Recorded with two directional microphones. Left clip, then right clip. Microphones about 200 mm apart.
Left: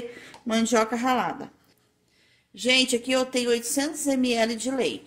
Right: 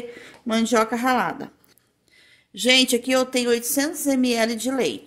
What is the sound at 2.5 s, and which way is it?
Speech, 35° right (ahead or behind).